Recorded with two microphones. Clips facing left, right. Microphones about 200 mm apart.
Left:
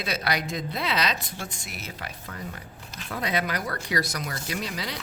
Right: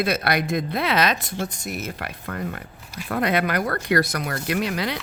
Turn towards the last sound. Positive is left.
turn(degrees=-60)  # may be behind; listen again after turning